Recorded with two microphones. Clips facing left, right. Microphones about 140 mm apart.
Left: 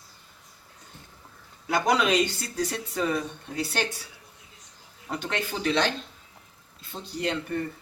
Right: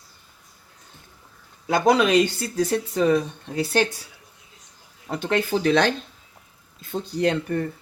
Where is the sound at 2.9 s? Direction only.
35° right (ahead or behind).